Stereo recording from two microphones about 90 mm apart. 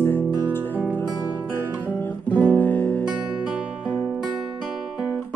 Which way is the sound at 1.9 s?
20° left (ahead or behind).